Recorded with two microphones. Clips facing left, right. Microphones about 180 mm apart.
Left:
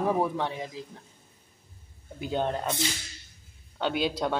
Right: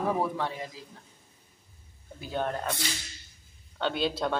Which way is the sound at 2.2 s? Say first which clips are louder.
Left 3 dB; 20° left (ahead or behind).